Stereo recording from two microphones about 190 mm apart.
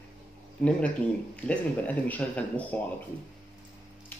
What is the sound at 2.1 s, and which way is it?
Speech, 10° left (ahead or behind).